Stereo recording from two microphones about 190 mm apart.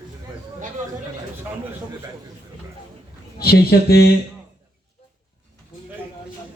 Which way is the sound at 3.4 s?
55° left (ahead or behind).